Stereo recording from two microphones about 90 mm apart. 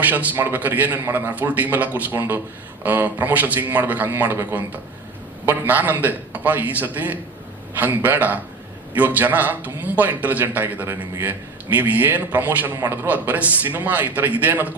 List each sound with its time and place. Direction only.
0.0 s a man's voice: 20° right (ahead or behind)